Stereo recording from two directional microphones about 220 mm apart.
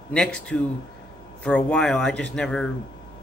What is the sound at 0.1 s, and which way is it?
Speech, 5° left (ahead or behind).